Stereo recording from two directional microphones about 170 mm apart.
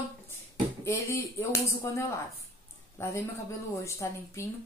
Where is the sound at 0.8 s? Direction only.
15° left (ahead or behind).